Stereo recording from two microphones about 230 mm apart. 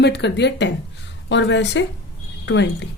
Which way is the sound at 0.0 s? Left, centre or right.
Left.